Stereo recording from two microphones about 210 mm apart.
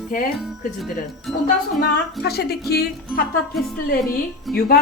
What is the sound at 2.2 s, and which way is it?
Speech, 50° left (ahead or behind).